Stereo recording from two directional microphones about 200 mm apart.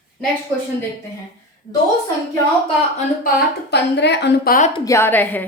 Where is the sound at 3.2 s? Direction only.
50° left (ahead or behind).